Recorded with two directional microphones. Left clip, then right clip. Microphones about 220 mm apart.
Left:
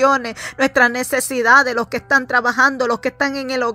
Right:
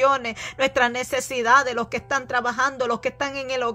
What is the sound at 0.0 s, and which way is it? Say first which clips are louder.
A woman's voice: left 4 dB; 20° left (ahead or behind).